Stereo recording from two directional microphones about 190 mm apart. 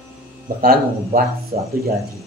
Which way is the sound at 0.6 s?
50° right (ahead or behind).